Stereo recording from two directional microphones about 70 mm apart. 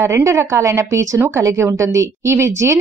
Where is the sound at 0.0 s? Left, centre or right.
Right.